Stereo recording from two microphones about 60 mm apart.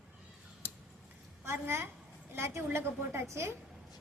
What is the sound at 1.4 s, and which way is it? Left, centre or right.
A woman's voice, right.